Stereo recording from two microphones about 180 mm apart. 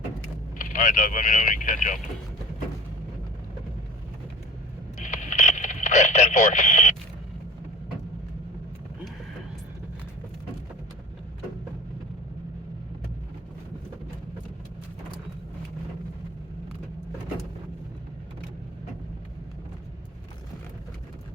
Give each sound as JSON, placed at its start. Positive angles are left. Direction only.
{"t": 0.6, "sound": "speech", "side_deg": 45}
{"t": 4.9, "sound": "radio", "side_deg": 45}